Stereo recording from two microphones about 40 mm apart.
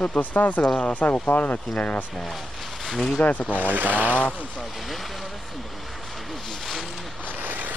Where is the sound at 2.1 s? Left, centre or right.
Centre.